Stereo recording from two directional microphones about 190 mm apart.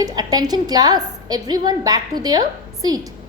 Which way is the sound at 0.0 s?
20° right (ahead or behind).